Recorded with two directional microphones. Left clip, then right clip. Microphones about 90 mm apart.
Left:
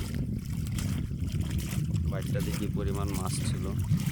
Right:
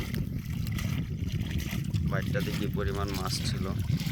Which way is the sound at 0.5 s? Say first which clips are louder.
Right 4 dB; 35° left (ahead or behind).